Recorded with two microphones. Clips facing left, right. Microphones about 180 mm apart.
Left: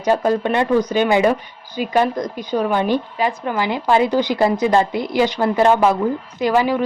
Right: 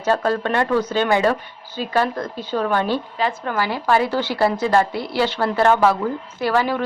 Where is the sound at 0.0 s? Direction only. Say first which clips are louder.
Left 3 dB; 15° left (ahead or behind).